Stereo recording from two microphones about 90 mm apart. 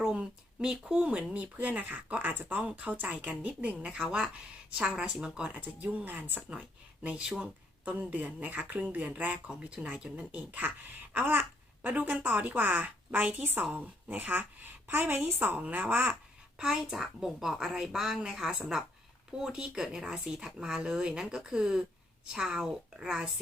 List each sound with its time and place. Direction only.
0.0 s a woman's voice: 10° right (ahead or behind)
16.6 s a woman's voice: 5° right (ahead or behind)